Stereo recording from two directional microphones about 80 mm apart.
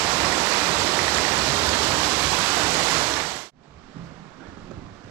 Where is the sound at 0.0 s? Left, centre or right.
Right.